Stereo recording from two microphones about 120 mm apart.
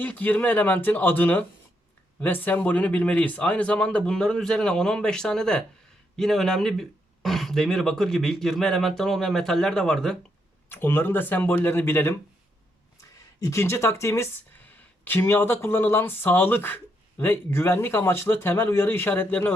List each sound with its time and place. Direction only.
0.0 s a man's voice: 15° left (ahead or behind)
10.7 s a man's voice: 20° left (ahead or behind)
13.4 s speech: 25° left (ahead or behind)